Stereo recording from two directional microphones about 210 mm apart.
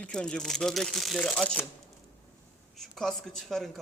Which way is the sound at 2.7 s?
Centre (ahead or behind).